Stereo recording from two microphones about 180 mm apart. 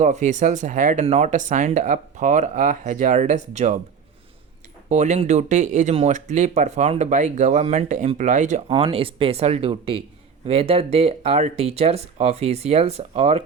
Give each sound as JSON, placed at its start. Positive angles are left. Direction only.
{"t": 0.0, "sound": "speech", "side_deg": -40}
{"t": 4.9, "sound": "speech", "side_deg": -40}